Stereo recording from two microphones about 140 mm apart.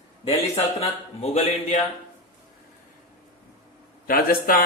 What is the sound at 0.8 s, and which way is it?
A man's voice, 50° left (ahead or behind).